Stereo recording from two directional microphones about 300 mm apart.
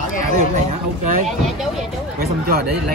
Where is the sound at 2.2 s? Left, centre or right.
Right.